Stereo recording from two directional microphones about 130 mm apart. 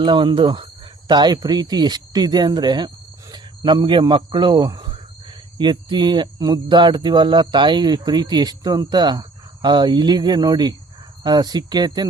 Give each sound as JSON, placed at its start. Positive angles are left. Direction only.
{"t": 0.0, "sound": "speech", "side_deg": -35}